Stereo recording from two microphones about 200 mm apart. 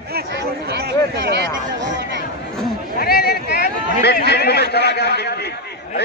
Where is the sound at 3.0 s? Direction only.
50° left (ahead or behind).